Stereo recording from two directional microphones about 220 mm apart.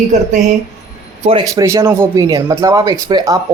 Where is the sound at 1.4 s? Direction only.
15° right (ahead or behind).